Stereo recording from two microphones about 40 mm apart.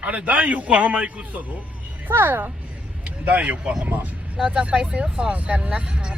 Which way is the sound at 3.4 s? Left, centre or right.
Right.